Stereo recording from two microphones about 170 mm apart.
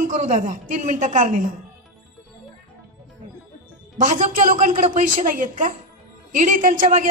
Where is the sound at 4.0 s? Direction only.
50° right (ahead or behind).